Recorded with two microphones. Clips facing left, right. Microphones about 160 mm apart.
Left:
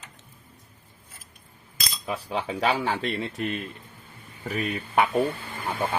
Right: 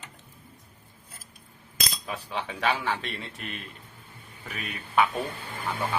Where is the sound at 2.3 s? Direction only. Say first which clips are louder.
Left 3 dB; 35° left (ahead or behind).